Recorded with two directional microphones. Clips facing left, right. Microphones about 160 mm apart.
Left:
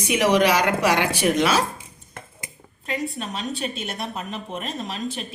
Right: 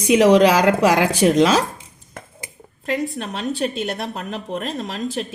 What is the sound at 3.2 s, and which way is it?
A woman's voice, 65° right (ahead or behind).